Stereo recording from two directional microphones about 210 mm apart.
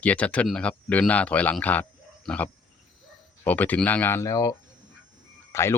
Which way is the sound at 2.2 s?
5° left (ahead or behind).